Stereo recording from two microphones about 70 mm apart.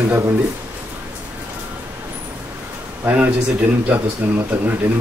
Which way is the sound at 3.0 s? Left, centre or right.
Right.